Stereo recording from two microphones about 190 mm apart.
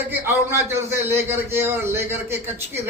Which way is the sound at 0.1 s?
10° right (ahead or behind).